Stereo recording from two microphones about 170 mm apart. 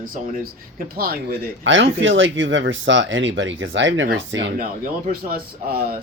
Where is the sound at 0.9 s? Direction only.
60° right (ahead or behind); by 4.5 s 90° right.